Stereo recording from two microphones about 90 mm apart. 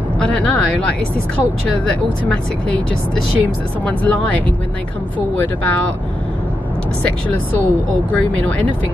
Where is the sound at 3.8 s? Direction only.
15° left (ahead or behind).